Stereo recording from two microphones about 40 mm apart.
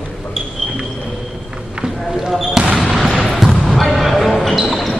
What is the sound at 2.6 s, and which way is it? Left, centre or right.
Basketball bounce, right.